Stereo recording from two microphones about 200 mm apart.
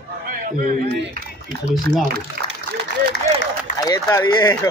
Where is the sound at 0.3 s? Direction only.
45° right (ahead or behind).